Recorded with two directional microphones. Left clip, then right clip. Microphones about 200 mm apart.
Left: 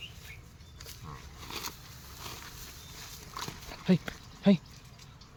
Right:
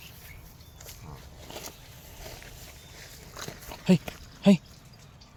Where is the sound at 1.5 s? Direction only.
20° left (ahead or behind).